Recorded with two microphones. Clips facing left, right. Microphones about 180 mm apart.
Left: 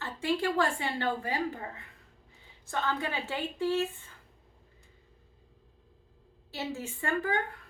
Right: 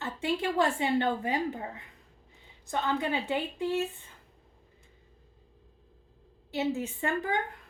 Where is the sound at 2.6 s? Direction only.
15° right (ahead or behind).